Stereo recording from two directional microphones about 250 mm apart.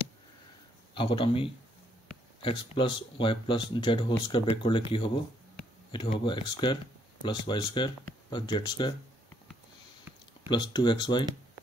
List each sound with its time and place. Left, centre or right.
0.9 s speech: left
10.5 s speech: centre